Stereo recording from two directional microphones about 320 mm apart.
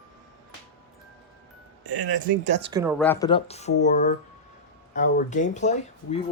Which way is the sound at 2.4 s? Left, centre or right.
Right.